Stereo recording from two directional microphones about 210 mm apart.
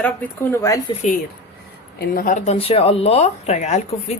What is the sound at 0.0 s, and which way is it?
Speech, 10° left (ahead or behind).